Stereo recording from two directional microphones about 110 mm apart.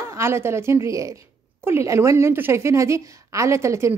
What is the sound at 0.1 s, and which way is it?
A woman's voice, 25° right (ahead or behind).